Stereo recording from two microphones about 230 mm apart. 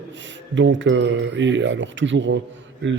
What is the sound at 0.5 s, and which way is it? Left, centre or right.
Speech, right.